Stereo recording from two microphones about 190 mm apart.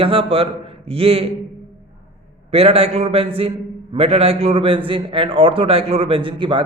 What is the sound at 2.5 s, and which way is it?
A man's voice, 30° right (ahead or behind).